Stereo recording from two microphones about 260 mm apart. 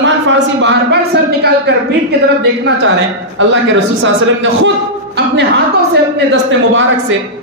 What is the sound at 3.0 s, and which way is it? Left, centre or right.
A man's voice, right.